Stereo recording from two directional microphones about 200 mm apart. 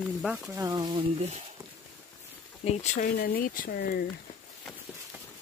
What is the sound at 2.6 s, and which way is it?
Speech, 35° left (ahead or behind).